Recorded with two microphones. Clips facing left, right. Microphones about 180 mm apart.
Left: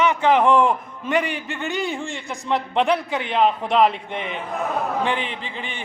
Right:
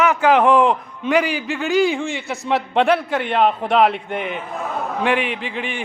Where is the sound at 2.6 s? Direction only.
75° right (ahead or behind).